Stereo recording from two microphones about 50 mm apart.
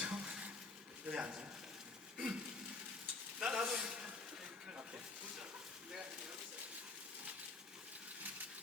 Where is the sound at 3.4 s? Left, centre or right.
Centre.